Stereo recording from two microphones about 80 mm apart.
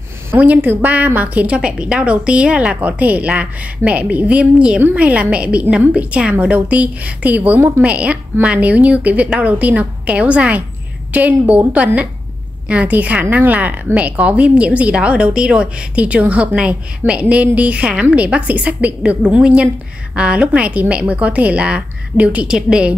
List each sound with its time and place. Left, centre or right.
0.4 s a woman's voice: right